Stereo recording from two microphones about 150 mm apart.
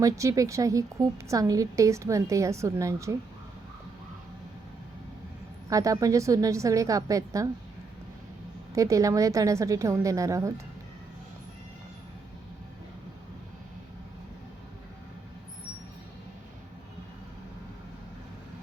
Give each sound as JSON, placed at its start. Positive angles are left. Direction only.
{"t": 0.0, "sound": "a woman's voice", "side_deg": -20}
{"t": 5.6, "sound": "a woman's voice", "side_deg": -20}
{"t": 8.7, "sound": "a woman's voice", "side_deg": -20}